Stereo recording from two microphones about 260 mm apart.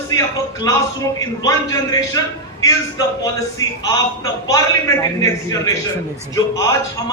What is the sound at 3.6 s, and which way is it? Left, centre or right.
A man's voice, centre.